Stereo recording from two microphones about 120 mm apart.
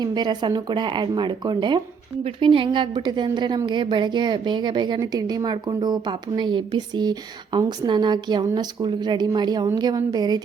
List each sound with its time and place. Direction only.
0.0 s a woman's voice: 35° right (ahead or behind)